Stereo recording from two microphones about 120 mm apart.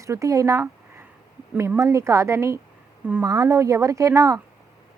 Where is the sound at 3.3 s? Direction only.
25° right (ahead or behind).